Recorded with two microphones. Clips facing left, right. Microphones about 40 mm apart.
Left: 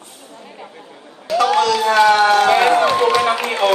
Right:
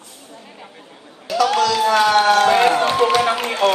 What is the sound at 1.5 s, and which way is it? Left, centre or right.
Speech, left.